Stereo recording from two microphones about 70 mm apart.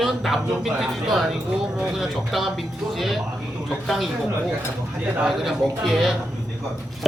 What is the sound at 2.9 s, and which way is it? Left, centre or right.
Speech, centre.